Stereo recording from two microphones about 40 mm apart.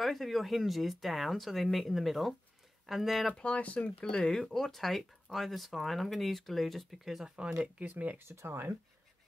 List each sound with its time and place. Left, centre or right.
0.0 s speech: centre
3.3 s speech: left
4.0 s speech: centre
7.3 s speech: centre
7.9 s speech: right
8.2 s speech: right